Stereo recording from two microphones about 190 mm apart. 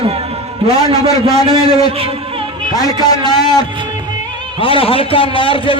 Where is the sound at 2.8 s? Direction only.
20° left (ahead or behind).